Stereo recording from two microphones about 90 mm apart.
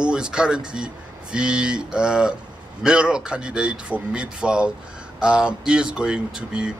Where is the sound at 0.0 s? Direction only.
10° right (ahead or behind).